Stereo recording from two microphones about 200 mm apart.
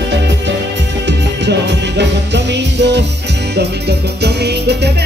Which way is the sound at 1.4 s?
60° right (ahead or behind).